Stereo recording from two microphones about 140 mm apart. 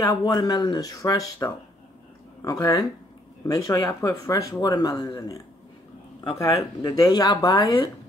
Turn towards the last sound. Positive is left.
turn(degrees=25)  # may be behind; listen again after turning